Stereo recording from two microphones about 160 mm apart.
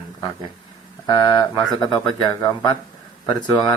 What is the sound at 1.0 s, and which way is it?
Speech, 25° left (ahead or behind).